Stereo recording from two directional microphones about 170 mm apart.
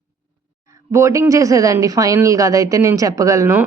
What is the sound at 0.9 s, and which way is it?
Speech, 20° right (ahead or behind).